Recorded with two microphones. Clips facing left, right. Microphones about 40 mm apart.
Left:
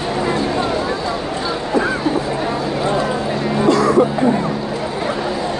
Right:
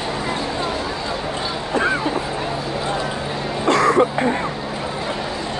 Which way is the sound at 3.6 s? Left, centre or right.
Right.